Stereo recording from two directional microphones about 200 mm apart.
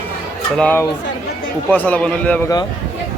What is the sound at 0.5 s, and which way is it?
A man's voice, 10° left (ahead or behind).